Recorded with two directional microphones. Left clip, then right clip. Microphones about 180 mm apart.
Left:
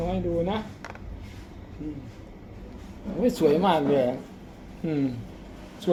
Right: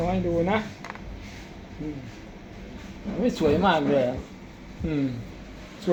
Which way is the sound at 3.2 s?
Centre (ahead or behind).